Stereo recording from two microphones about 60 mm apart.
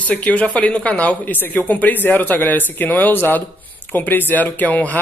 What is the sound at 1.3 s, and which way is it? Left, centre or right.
Speech, left.